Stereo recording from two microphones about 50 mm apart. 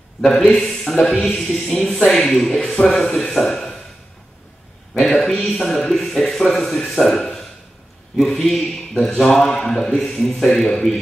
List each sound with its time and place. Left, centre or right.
0.3 s speech: centre
4.9 s a sound: centre
5.5 s a man's voice: centre